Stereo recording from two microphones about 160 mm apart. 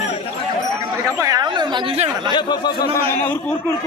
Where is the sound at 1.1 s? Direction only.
20° right (ahead or behind).